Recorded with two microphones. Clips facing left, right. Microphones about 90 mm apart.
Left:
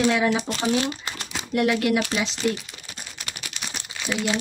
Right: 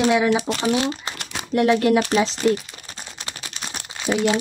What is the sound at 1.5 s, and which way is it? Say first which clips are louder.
Speech: right 4 dB; 30° right (ahead or behind).